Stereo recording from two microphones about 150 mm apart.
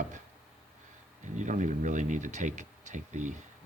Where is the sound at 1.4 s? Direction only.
55° right (ahead or behind).